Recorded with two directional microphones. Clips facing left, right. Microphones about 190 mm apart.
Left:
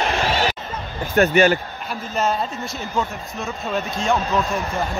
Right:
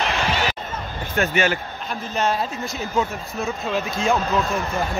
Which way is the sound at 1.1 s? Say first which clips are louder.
Left 6 dB; 35° left (ahead or behind).